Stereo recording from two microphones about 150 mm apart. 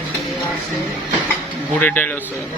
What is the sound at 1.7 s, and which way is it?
Speech, 10° left (ahead or behind).